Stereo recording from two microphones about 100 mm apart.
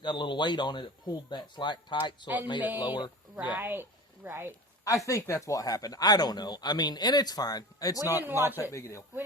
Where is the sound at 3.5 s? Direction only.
20° right (ahead or behind).